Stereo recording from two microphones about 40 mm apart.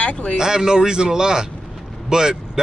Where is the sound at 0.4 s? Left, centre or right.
Centre.